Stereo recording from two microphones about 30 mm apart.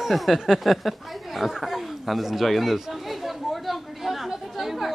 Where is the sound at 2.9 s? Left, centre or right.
Centre.